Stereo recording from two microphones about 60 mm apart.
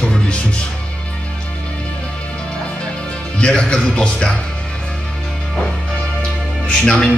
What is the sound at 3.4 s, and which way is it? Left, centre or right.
Speech, centre.